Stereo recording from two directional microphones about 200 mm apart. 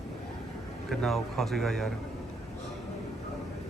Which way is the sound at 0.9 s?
Centre (ahead or behind).